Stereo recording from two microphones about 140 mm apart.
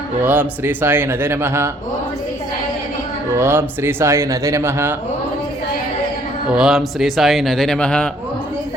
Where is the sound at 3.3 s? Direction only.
15° right (ahead or behind).